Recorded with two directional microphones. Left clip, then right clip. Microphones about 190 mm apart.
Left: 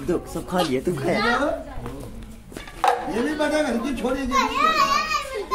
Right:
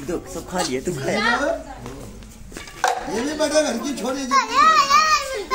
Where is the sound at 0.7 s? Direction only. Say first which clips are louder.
Left 1 dB; 60° left (ahead or behind).